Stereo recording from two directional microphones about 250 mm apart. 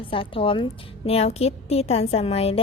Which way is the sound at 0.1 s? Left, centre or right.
Left.